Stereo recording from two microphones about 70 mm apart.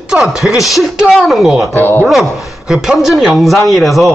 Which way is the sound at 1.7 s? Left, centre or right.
Left.